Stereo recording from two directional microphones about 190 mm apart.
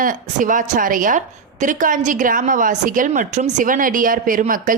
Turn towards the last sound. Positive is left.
turn(degrees=-45)  # may be behind; listen again after turning